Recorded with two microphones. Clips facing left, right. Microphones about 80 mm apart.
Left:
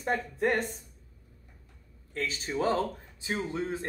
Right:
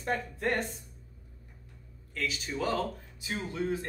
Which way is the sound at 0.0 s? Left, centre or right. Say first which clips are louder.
Left 4 dB; centre.